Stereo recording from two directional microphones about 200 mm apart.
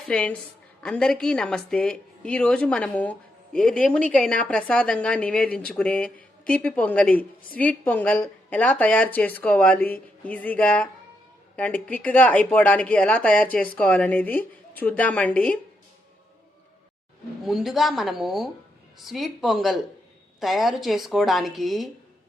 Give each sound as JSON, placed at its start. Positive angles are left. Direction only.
{"t": 0.1, "sound": "a woman's voice", "side_deg": 5}
{"t": 17.4, "sound": "a woman's voice", "side_deg": 0}